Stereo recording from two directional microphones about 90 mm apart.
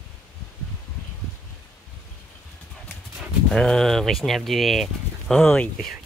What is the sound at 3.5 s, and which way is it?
Speech, 10° left (ahead or behind).